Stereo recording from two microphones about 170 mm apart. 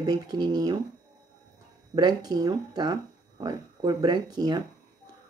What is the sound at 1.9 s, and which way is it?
Speech, 25° right (ahead or behind).